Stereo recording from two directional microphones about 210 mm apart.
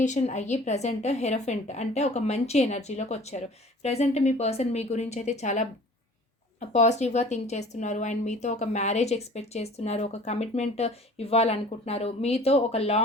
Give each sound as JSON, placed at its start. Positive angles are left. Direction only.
{"t": 0.0, "sound": "speech", "side_deg": 35}